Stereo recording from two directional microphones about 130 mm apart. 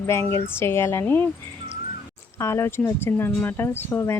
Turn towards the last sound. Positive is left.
turn(degrees=20)  # may be behind; listen again after turning